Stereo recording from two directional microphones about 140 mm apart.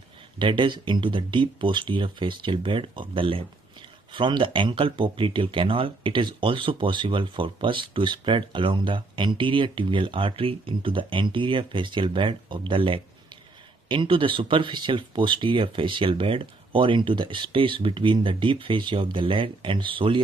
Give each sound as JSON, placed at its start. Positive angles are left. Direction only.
{"t": 0.4, "sound": "speech", "side_deg": -35}